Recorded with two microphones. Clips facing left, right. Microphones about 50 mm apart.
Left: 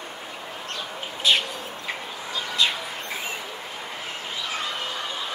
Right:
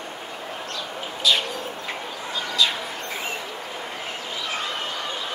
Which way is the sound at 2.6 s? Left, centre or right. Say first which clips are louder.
Right 1 dB; left.